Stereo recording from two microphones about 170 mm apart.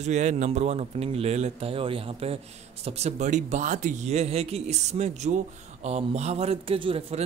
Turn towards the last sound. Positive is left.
turn(degrees=-35)  # may be behind; listen again after turning